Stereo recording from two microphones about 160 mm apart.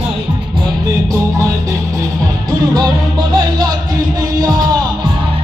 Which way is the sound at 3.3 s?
25° right (ahead or behind).